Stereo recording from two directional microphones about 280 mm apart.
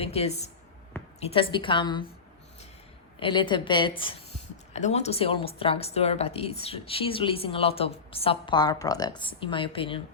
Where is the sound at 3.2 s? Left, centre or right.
Centre.